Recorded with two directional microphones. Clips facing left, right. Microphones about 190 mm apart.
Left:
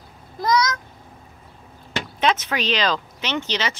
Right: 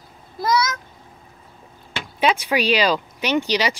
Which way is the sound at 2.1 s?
10° right (ahead or behind).